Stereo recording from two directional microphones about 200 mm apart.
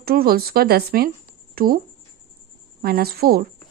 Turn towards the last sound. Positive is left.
turn(degrees=-50)  # may be behind; listen again after turning